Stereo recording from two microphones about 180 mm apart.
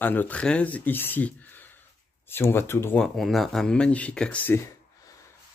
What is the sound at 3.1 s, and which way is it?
Speech, centre (ahead or behind).